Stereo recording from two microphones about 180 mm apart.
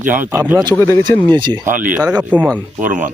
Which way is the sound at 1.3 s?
25° right (ahead or behind).